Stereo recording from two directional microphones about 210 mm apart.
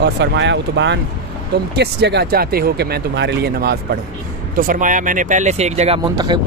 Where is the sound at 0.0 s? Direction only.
55° right (ahead or behind).